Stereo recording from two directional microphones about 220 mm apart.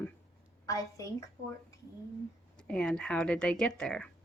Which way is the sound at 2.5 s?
5° left (ahead or behind).